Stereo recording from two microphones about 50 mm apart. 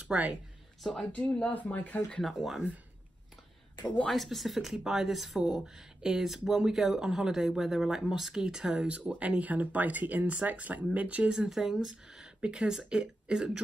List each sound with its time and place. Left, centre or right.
0.1 s speech: right
1.1 s speech: left
2.2 s speech: centre
3.8 s speech: left
4.1 s speech: centre
8.7 s speech: right
11.3 s speech: centre